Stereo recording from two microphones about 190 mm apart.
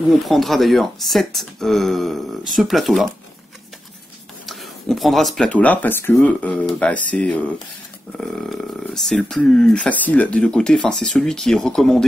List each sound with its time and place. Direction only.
0.2 s speech: centre (ahead or behind)
4.5 s speech: centre (ahead or behind)